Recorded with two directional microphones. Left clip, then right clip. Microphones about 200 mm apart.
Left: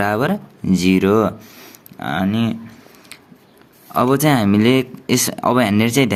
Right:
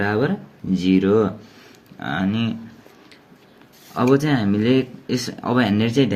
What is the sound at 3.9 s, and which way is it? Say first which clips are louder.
Speech: left 3 dB; 40° left (ahead or behind).